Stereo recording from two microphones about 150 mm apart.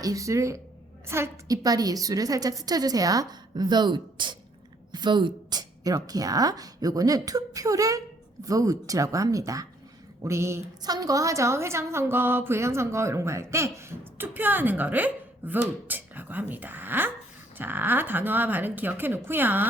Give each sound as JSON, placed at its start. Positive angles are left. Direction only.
{"t": 0.0, "sound": "a woman's voice", "side_deg": -20}